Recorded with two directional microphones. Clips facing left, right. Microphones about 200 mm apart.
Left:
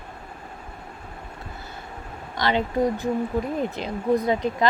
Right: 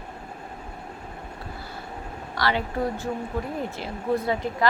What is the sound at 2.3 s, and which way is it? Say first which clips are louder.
A woman's voice: left 3 dB; 20° left (ahead or behind).